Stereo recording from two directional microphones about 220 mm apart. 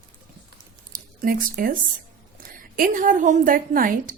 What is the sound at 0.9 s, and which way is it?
A woman's voice, 40° right (ahead or behind).